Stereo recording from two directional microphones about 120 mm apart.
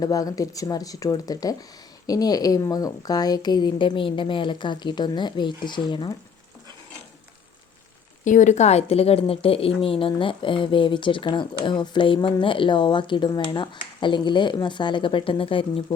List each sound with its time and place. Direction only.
0.0 s a woman's voice: 30° left (ahead or behind)
8.2 s a woman's voice: 90° left; by 15.8 s 50° left (ahead or behind)